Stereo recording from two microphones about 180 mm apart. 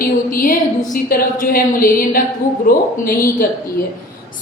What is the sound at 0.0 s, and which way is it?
A woman's voice, 50° left (ahead or behind).